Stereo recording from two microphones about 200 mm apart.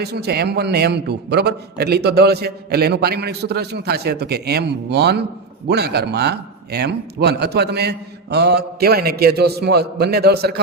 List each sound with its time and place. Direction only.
0.0 s a man's voice: 55° right (ahead or behind)